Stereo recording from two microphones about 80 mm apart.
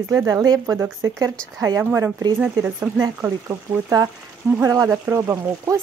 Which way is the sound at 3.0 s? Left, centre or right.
Right.